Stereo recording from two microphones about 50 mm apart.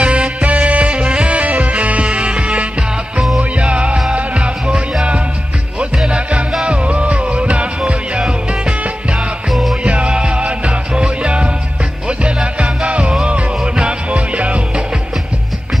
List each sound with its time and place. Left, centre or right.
0.0 s music: right
6.0 s music: right
9.5 s music: centre
9.8 s music: right